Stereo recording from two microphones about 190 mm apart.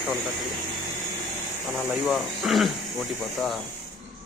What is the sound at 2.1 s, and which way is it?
Speech, centre (ahead or behind).